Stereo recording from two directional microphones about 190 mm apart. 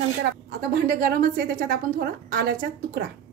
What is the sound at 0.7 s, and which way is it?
A woman's voice, 50° right (ahead or behind).